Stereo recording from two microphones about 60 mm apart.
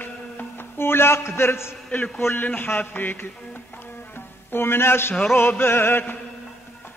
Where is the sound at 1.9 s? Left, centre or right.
Left.